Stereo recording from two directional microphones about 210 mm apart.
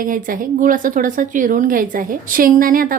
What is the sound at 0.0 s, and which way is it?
A woman's voice, 40° right (ahead or behind).